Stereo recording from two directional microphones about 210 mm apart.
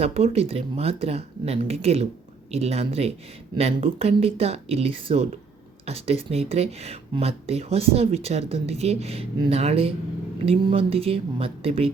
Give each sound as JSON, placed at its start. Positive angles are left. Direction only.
{"t": 0.0, "sound": "speech", "side_deg": -30}